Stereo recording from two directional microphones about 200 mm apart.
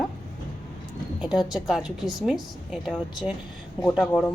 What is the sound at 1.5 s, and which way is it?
A woman's voice, centre (ahead or behind).